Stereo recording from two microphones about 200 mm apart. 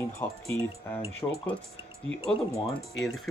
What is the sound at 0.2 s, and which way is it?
Speech, 15° left (ahead or behind).